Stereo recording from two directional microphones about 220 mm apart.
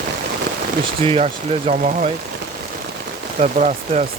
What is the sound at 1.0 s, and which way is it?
Speech, 25° right (ahead or behind).